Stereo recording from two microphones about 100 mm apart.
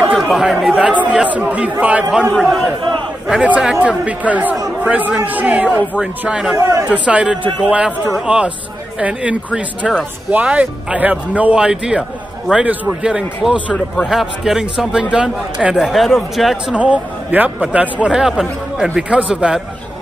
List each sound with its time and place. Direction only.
0.3 s speech: 5° right (ahead or behind)
0.9 s speech: 15° right (ahead or behind)
3.3 s speech: 10° right (ahead or behind)
6.5 s speech: 30° right (ahead or behind)
6.9 s speech: 10° right (ahead or behind)
13.7 s speech: centre (ahead or behind)
16.7 s speech: 10° right (ahead or behind)